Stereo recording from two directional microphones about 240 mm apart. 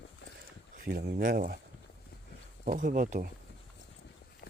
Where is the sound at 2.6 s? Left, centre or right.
Right.